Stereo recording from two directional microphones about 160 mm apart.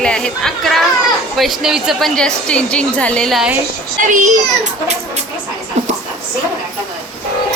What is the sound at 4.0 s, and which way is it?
A child's voice, 55° right (ahead or behind).